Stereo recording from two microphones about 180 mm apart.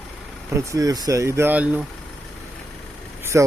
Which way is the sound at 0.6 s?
20° right (ahead or behind).